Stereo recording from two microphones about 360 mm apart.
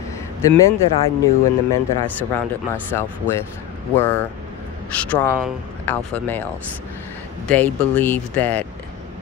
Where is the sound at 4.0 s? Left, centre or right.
Centre.